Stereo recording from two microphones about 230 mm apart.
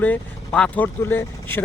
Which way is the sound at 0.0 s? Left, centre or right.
Centre.